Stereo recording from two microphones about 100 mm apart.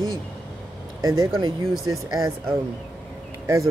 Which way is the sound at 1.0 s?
40° right (ahead or behind).